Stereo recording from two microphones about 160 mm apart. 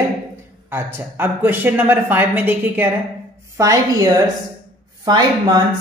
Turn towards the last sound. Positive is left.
turn(degrees=-25)  # may be behind; listen again after turning